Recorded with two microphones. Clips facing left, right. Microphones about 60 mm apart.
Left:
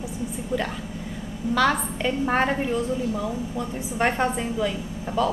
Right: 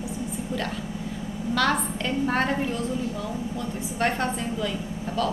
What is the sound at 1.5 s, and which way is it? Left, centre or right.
A woman's voice, centre.